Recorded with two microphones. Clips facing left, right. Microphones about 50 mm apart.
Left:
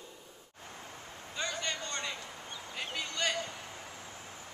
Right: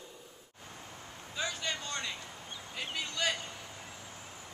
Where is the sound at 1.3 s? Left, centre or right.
Centre.